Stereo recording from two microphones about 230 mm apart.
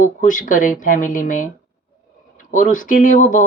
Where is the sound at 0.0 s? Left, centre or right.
Left.